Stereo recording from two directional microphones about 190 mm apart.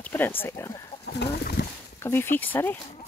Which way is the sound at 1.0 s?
60° left (ahead or behind).